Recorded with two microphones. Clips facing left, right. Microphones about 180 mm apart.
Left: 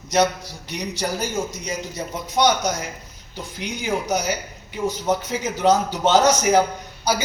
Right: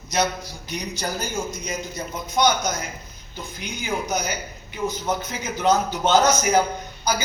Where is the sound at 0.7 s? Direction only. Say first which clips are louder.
Left 3 dB; 75° left (ahead or behind).